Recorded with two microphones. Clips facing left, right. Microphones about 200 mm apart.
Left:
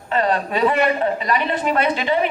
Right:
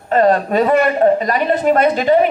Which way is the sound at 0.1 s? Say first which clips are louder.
Right 7 dB; 45° right (ahead or behind).